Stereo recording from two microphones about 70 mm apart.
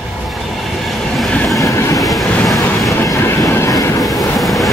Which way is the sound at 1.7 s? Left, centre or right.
Left.